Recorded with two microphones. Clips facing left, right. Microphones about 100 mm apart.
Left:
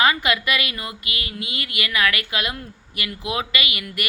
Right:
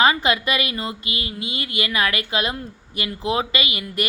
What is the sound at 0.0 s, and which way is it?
Speech, 25° right (ahead or behind).